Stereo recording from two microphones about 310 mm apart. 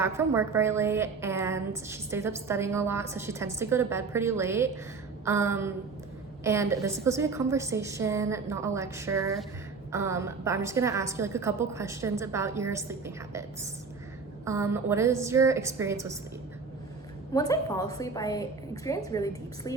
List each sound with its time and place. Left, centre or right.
0.0 s a woman's voice: centre
14.4 s a woman's voice: centre
17.3 s a woman's voice: centre